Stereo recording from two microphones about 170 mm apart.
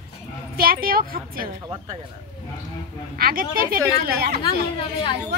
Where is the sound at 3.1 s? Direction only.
60° right (ahead or behind).